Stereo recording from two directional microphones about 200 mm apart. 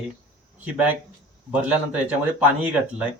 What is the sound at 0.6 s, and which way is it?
Speech, 10° right (ahead or behind).